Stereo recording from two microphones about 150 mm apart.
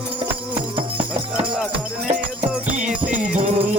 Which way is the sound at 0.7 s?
35° right (ahead or behind).